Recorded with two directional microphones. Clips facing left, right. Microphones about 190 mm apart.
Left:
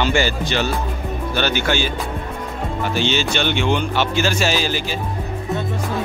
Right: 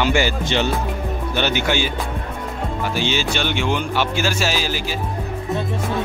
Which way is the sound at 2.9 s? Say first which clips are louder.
Left 2 dB; 10° right (ahead or behind).